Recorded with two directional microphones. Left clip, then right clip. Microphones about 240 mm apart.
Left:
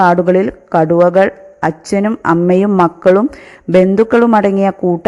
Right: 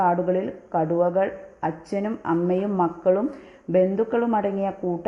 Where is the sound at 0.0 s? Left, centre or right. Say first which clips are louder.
Left 11 dB; left.